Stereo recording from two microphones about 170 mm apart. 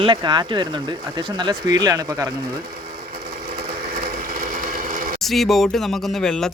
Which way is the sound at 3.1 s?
55° right (ahead or behind).